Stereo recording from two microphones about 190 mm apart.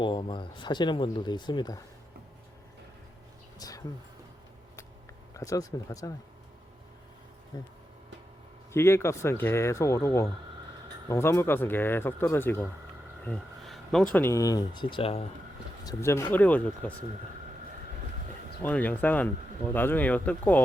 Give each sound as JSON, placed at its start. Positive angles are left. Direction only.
{"t": 0.0, "sound": "speech", "side_deg": 25}
{"t": 3.6, "sound": "a sound", "side_deg": 20}
{"t": 5.3, "sound": "speech", "side_deg": 15}
{"t": 7.5, "sound": "speech", "side_deg": 20}
{"t": 8.7, "sound": "speech", "side_deg": 15}
{"t": 15.8, "sound": "speech", "side_deg": 15}
{"t": 18.6, "sound": "speech", "side_deg": 10}